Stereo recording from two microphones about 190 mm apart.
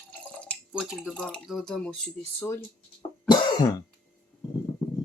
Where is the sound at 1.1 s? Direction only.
5° left (ahead or behind).